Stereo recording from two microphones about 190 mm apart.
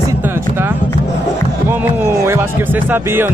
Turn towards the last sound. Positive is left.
turn(degrees=-10)  # may be behind; listen again after turning